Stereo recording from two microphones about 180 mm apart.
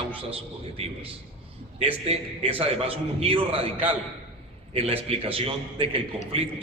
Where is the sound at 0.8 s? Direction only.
30° right (ahead or behind).